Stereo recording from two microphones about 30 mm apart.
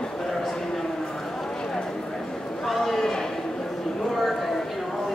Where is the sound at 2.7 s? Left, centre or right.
Centre.